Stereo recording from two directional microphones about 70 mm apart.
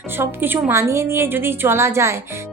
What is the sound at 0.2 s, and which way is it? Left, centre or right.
A woman's voice, right.